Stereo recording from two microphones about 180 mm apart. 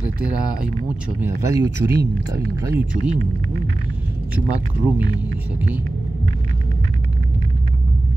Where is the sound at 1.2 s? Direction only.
15° right (ahead or behind).